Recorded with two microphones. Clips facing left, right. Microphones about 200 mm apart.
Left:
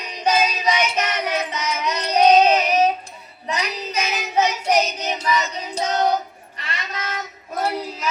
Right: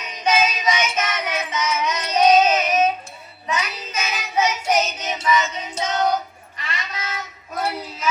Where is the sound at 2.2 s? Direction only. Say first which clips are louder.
Left 1 dB; 35° left (ahead or behind).